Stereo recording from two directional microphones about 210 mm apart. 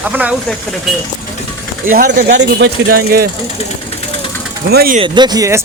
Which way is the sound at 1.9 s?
45° right (ahead or behind).